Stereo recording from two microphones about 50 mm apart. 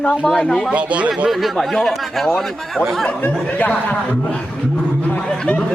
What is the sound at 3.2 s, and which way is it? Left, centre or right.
Speech, left.